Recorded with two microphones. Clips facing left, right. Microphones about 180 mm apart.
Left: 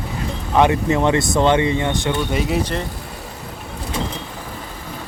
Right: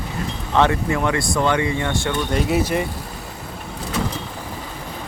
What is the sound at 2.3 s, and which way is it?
Speech, centre (ahead or behind).